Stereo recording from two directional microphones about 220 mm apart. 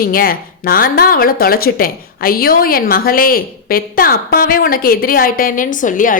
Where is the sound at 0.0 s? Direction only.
40° left (ahead or behind).